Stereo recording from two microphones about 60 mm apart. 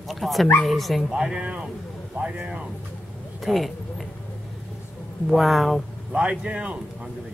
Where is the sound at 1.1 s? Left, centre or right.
Centre.